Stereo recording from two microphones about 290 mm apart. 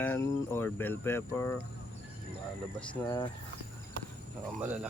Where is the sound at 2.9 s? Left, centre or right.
Centre.